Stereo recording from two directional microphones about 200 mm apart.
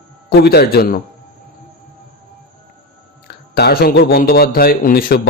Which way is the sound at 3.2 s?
50° left (ahead or behind).